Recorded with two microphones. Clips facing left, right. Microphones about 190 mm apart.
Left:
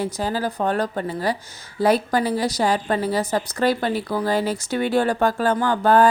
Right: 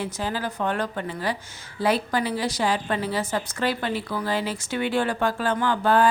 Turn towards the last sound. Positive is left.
turn(degrees=45)  # may be behind; listen again after turning